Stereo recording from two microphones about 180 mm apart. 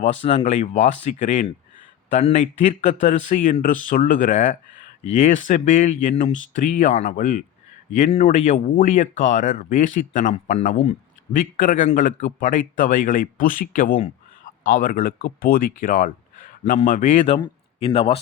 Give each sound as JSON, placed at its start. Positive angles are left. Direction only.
{"t": 0.0, "sound": "speech", "side_deg": 40}
{"t": 17.3, "sound": "speech", "side_deg": 30}